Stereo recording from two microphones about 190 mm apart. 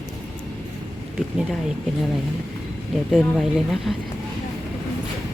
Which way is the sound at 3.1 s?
Centre (ahead or behind).